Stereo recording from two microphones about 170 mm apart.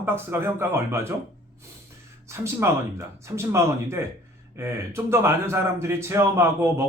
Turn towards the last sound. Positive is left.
turn(degrees=-15)  # may be behind; listen again after turning